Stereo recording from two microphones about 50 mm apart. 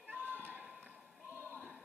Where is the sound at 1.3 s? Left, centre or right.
Right.